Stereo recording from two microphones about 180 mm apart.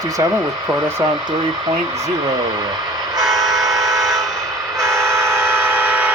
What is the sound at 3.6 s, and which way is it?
Train, 20° right (ahead or behind).